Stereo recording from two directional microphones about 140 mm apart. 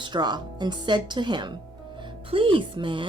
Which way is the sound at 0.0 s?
30° right (ahead or behind).